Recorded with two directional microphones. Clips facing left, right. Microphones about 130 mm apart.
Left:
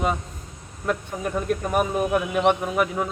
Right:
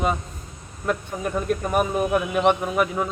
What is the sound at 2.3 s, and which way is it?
Speech, 25° right (ahead or behind).